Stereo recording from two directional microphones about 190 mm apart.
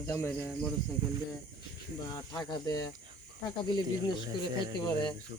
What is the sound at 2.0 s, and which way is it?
Speech, 20° left (ahead or behind).